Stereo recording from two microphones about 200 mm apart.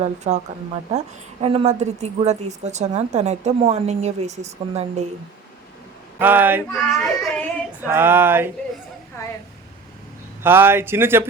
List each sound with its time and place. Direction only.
0.0 s a woman's voice: 35° right (ahead or behind)
6.1 s speech: 10° right (ahead or behind)
6.7 s child singing: centre (ahead or behind)
7.8 s speech: 10° right (ahead or behind)
9.2 s a sound: 15° left (ahead or behind)
10.4 s speech: 10° right (ahead or behind)